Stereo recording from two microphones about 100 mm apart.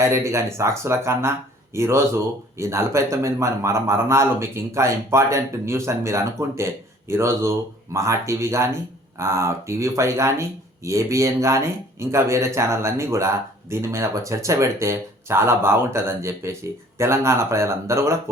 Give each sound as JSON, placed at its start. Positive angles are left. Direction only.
{"t": 0.0, "sound": "speech", "side_deg": -30}